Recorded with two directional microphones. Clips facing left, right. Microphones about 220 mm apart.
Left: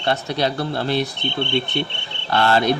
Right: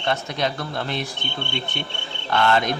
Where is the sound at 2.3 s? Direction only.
35° left (ahead or behind).